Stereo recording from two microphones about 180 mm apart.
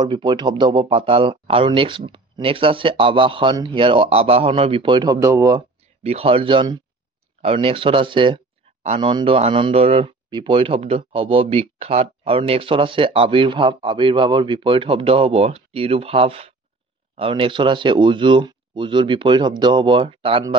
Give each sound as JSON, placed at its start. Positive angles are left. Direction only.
{"t": 0.0, "sound": "speech", "side_deg": -25}
{"t": 6.0, "sound": "speech", "side_deg": -35}